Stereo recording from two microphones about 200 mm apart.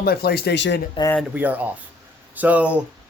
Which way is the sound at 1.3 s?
10° right (ahead or behind).